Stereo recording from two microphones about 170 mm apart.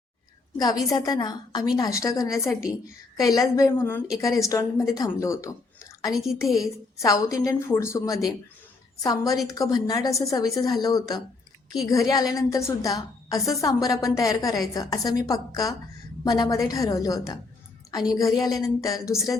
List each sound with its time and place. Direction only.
0.5 s a woman's voice: 20° left (ahead or behind)
6.5 s a woman's voice: centre (ahead or behind)
7.0 s a woman's voice: 20° left (ahead or behind)